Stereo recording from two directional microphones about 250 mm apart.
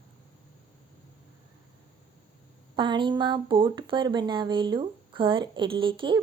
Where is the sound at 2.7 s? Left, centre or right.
Centre.